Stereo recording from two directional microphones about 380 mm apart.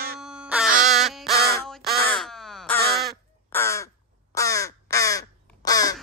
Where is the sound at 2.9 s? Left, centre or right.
Centre.